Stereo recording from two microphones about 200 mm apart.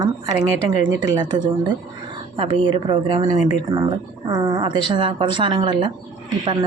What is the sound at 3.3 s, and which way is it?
Speech, 35° left (ahead or behind).